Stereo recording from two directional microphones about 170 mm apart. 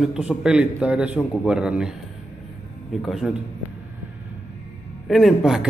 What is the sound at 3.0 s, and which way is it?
Speech, centre (ahead or behind).